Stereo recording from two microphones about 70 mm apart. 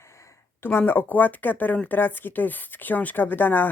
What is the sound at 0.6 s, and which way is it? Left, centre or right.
Speech, left.